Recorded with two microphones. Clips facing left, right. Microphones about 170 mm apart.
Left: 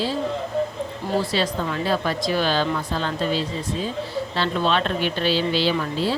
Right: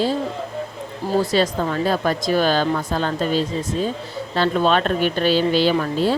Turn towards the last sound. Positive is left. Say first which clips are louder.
# right 4 dB
turn(degrees=-50)  # may be behind; listen again after turning